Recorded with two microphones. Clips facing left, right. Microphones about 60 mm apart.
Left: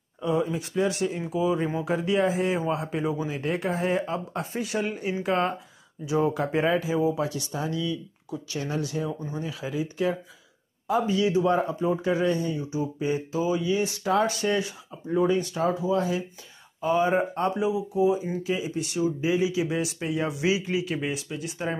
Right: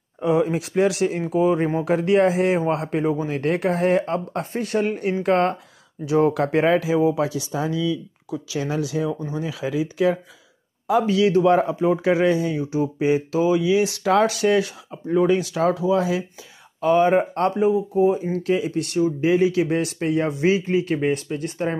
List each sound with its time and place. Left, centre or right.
0.2 s speech: right
1.2 s a man's voice: right
2.0 s speech: right
2.6 s speech: right
9.2 s speech: right
16.8 s speech: right
17.6 s a man's voice: right